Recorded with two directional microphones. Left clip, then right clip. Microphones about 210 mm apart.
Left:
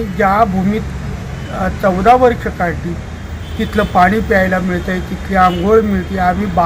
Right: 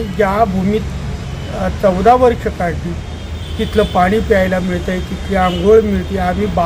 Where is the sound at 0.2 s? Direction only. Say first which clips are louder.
Left 2 dB; centre (ahead or behind).